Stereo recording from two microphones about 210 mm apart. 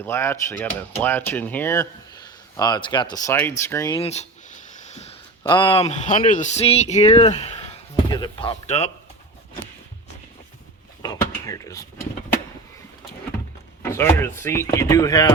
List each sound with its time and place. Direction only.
0.0 s speech: 10° left (ahead or behind)
4.0 s speech: 30° left (ahead or behind)
11.0 s speech: 15° left (ahead or behind)
13.8 s speech: 10° left (ahead or behind)